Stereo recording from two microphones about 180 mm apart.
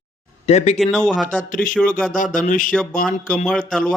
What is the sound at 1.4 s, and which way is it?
Speech, 45° left (ahead or behind).